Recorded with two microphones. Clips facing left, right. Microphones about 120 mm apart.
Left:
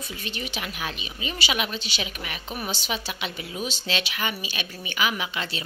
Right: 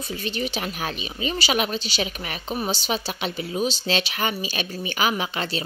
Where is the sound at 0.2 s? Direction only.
35° right (ahead or behind).